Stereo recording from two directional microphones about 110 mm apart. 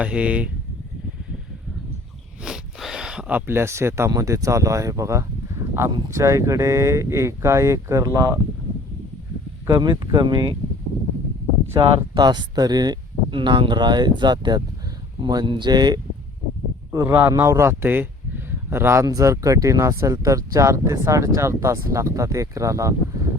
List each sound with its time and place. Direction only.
0.0 s speech: 10° right (ahead or behind)
2.4 s a sound: 5° right (ahead or behind); by 4.1 s 25° right (ahead or behind)
4.1 s speech: 30° right (ahead or behind)
9.6 s speech: 40° right (ahead or behind)
11.8 s speech: 40° right (ahead or behind)
16.9 s speech: 25° right (ahead or behind)